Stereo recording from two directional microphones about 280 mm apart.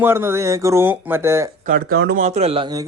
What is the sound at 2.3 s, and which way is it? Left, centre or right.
Speech, right.